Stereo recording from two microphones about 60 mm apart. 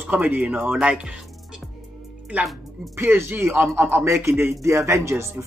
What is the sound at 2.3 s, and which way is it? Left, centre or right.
Speech, right.